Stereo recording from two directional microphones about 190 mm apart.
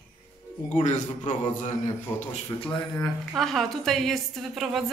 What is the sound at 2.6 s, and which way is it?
A woman's voice, 10° left (ahead or behind).